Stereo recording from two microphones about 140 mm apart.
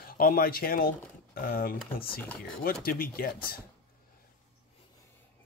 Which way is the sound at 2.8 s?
90° left.